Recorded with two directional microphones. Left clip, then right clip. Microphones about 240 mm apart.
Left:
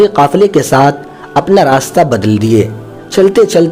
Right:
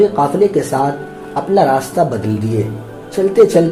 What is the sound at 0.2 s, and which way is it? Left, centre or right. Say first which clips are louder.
Speech: left 5 dB; left.